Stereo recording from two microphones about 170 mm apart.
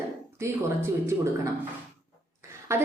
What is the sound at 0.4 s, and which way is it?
Speech, 15° right (ahead or behind).